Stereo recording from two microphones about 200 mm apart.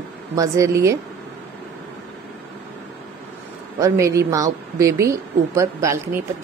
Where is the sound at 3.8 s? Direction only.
15° right (ahead or behind).